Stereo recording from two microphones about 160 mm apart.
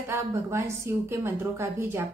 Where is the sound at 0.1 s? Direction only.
20° right (ahead or behind).